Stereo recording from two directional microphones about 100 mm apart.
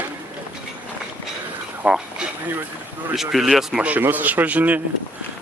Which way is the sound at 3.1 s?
5° right (ahead or behind).